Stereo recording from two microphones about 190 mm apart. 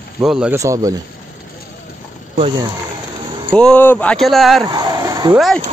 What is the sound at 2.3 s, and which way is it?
Speech, 30° right (ahead or behind).